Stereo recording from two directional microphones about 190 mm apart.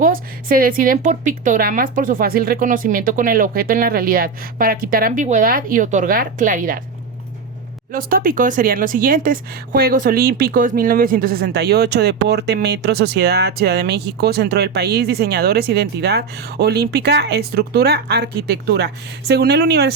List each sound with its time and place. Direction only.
0.0 s a woman's voice: 45° right (ahead or behind)
7.9 s speech: 50° right (ahead or behind)